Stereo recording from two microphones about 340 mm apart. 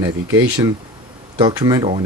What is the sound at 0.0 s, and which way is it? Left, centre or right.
Speech, centre.